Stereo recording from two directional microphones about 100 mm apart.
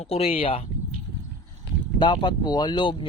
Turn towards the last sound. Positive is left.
turn(degrees=55)  # may be behind; listen again after turning